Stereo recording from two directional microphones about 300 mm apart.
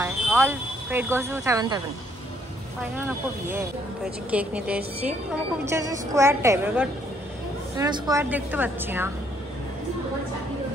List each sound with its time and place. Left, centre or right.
0.0 s speech: centre
4.3 s a woman's voice: centre